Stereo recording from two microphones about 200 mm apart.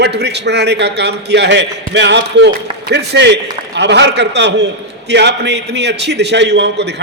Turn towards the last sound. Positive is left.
turn(degrees=-60)  # may be behind; listen again after turning